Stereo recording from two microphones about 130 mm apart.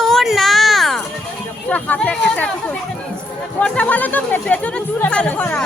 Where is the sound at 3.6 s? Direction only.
10° left (ahead or behind).